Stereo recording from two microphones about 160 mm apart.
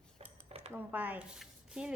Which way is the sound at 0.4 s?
40° right (ahead or behind).